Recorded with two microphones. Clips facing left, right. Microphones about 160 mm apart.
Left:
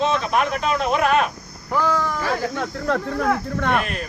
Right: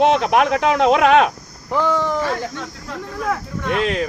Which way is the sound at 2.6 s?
65° left (ahead or behind).